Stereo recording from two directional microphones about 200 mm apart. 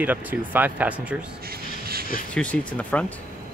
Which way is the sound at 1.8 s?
50° right (ahead or behind).